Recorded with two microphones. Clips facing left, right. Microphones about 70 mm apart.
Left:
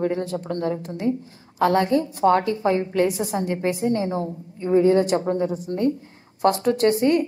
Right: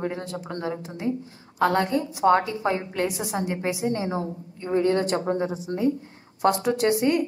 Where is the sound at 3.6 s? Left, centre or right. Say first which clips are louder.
Left 3 dB; right.